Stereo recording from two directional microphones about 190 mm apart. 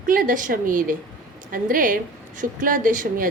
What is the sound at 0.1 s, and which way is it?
A woman's voice, 45° right (ahead or behind).